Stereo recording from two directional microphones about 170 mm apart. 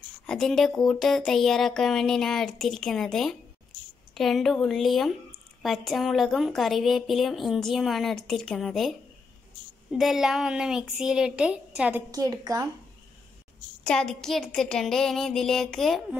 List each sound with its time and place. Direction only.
0.3 s a woman's voice: centre (ahead or behind)
12.1 s a woman's voice: 20° right (ahead or behind)
13.8 s a woman's voice: 5° left (ahead or behind)